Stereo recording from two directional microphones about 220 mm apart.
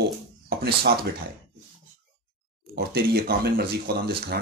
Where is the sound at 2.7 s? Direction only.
45° right (ahead or behind).